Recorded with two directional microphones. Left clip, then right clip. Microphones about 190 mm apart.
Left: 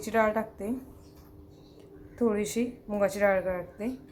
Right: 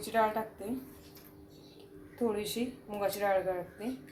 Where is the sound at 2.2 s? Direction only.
20° left (ahead or behind).